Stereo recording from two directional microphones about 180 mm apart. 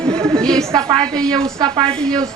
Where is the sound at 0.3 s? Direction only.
5° left (ahead or behind).